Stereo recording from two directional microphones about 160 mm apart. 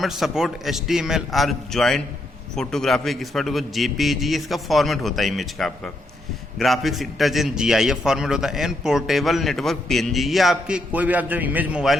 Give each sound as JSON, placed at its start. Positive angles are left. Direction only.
{"t": 0.0, "sound": "a man's voice", "side_deg": 0}